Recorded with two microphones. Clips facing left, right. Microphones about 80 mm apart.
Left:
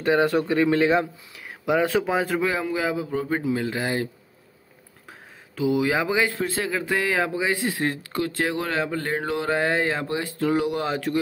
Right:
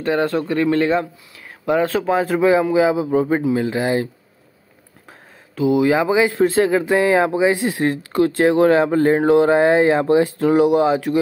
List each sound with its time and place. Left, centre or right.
0.0 s speech: centre
2.1 s speech: centre
2.4 s a man's voice: centre
5.6 s speech: centre
6.3 s speech: right
6.9 s speech: right